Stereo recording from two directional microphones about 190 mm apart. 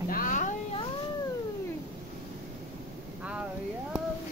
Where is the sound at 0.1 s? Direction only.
45° left (ahead or behind).